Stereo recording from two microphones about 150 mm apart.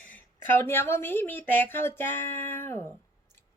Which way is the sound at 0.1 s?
15° left (ahead or behind).